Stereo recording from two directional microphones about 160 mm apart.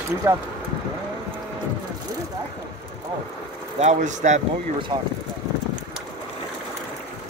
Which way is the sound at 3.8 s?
45° right (ahead or behind).